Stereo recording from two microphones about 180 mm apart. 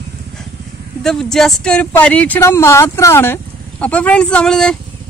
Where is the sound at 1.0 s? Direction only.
5° left (ahead or behind).